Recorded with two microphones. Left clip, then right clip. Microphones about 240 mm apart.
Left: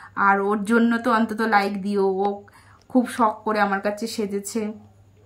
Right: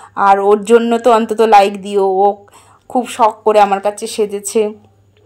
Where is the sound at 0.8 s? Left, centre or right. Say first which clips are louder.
Right 10 dB; left.